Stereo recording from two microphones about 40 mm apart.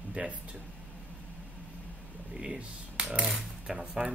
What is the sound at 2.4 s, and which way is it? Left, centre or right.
Speech, centre.